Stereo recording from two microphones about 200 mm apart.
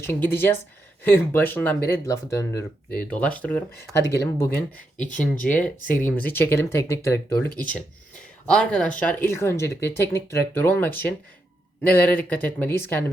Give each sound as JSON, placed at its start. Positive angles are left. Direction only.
{"t": 0.0, "sound": "speech", "side_deg": 10}
{"t": 5.2, "sound": "speech", "side_deg": 45}
{"t": 5.5, "sound": "speech", "side_deg": 5}